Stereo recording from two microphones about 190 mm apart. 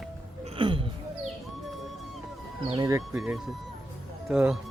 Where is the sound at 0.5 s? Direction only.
25° right (ahead or behind).